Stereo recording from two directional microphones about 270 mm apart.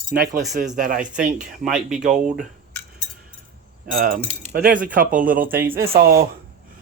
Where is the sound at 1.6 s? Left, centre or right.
Centre.